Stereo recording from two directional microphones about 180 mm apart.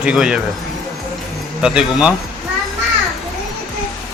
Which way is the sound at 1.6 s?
5° right (ahead or behind).